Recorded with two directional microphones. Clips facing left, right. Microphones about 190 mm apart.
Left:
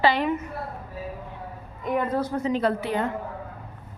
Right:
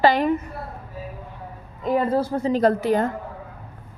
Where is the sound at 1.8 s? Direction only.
30° right (ahead or behind).